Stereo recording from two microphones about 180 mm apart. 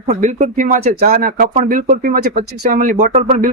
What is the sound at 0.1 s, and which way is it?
Speech, 40° right (ahead or behind).